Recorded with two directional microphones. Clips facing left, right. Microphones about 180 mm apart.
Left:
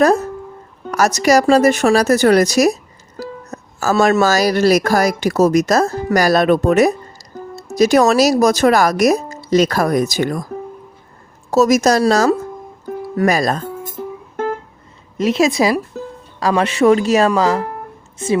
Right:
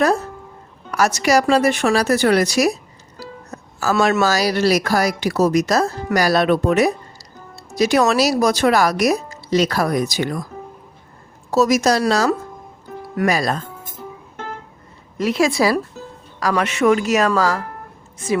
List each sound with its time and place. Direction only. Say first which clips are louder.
0.0 s speech: left 4 dB; 40° left (ahead or behind)
3.2 s music: left 6 dB; 45° left (ahead or behind)
4.0 s speech: left 4 dB; 45° left (ahead or behind)
11.5 s speech: left 3 dB; 45° left (ahead or behind)
12.9 s music: left 8 dB; 50° left (ahead or behind)
13.2 s speech: left 3 dB; 45° left (ahead or behind)
15.2 s speech: left 3 dB; 20° left (ahead or behind)